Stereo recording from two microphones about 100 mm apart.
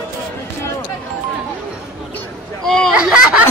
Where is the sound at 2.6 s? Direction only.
5° left (ahead or behind).